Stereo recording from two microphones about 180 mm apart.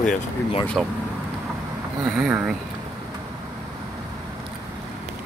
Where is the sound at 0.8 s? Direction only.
5° right (ahead or behind).